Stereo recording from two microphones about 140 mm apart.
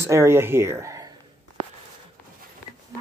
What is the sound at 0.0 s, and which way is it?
Speech, 20° right (ahead or behind).